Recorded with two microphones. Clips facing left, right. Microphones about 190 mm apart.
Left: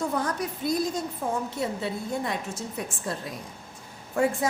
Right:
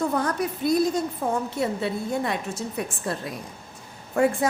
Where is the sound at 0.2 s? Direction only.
60° right (ahead or behind).